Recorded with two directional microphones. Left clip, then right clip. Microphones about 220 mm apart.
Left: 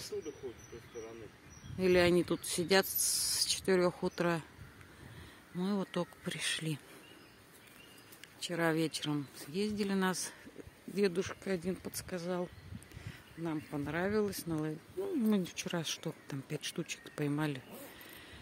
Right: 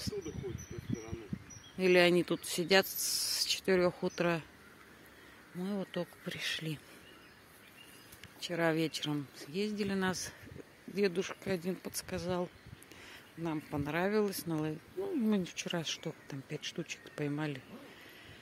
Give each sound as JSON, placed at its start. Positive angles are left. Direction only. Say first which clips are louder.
{"t": 1.8, "sound": "speech", "louder": "right 2 dB", "side_deg": 5}
{"t": 5.6, "sound": "speech", "louder": "left 2 dB", "side_deg": 20}
{"t": 8.4, "sound": "speech", "louder": "right 1 dB", "side_deg": 10}